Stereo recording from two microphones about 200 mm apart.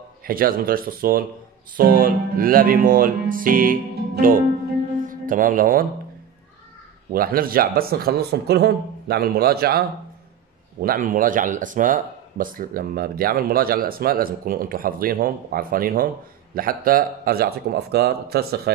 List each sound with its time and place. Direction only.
0.2 s speech: 45° right (ahead or behind)
7.1 s speech: 45° right (ahead or behind)